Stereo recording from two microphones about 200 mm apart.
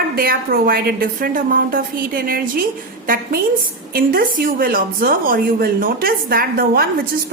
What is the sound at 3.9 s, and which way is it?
A woman's voice, 45° right (ahead or behind).